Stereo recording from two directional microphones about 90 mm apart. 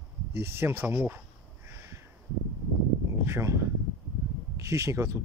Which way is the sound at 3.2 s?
30° right (ahead or behind).